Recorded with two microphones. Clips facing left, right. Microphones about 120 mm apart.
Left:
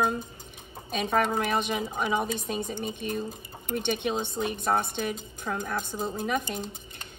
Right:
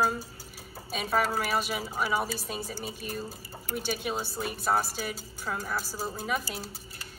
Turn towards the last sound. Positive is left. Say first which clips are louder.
# left 3 dB
turn(degrees=-5)  # may be behind; listen again after turning